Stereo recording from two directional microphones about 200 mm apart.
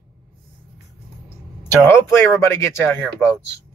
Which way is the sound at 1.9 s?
15° left (ahead or behind).